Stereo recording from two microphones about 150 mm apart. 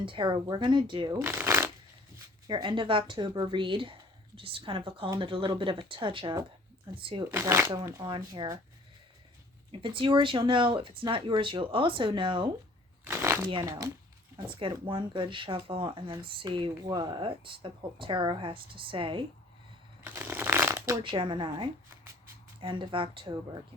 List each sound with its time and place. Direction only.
0.0 s speech: 35° right (ahead or behind)
1.2 s speech: 15° right (ahead or behind)
2.5 s speech: 35° right (ahead or behind)
7.3 s speech: 15° right (ahead or behind)
8.0 s speech: 25° right (ahead or behind)
9.8 s speech: 35° right (ahead or behind)
13.1 s speech: 15° right (ahead or behind)
14.6 s speech: 35° right (ahead or behind)
20.1 s shuffling cards: 15° right (ahead or behind)
21.0 s speech: 35° right (ahead or behind)